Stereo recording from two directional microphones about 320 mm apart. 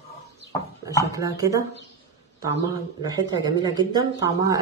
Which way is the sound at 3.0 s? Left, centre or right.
Centre.